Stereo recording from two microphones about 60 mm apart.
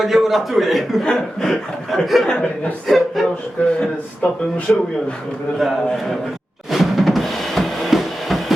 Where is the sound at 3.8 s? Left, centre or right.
Centre.